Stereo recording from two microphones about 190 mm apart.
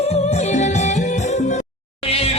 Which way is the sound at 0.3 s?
35° left (ahead or behind).